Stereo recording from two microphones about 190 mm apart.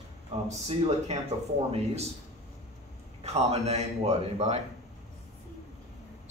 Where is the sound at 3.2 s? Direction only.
35° right (ahead or behind).